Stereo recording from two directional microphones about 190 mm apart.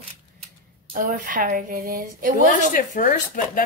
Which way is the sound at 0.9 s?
45° right (ahead or behind).